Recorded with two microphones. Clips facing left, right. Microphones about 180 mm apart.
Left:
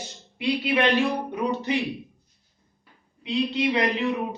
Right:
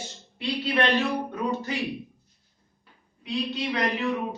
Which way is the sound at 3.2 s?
20° left (ahead or behind).